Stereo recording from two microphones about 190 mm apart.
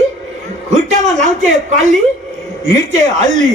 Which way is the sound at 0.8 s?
40° right (ahead or behind).